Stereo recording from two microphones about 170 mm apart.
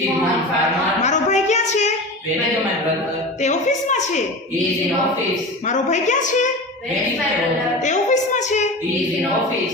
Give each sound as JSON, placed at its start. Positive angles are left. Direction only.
{"t": 1.0, "sound": "a sound", "side_deg": 40}
{"t": 3.8, "sound": "a woman's voice", "side_deg": 45}
{"t": 5.6, "sound": "a woman's voice", "side_deg": 45}
{"t": 7.9, "sound": "a woman's voice", "side_deg": 45}